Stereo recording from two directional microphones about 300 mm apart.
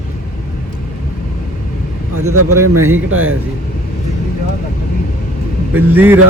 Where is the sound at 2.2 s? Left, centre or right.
Right.